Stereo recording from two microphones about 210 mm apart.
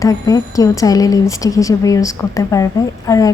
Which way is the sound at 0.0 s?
15° left (ahead or behind).